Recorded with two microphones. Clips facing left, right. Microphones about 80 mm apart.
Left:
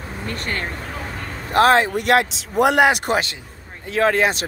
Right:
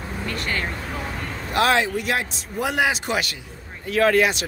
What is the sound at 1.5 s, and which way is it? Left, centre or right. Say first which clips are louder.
Speech: left 5 dB; left.